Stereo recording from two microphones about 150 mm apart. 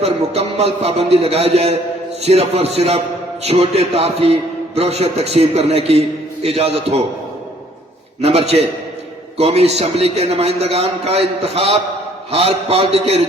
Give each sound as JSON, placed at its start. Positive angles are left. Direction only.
{"t": 0.0, "sound": "a man's voice", "side_deg": -45}
{"t": 8.2, "sound": "a man's voice", "side_deg": -40}